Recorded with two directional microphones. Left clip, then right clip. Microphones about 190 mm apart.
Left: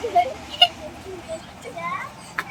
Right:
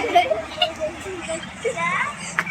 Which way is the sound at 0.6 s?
40° left (ahead or behind).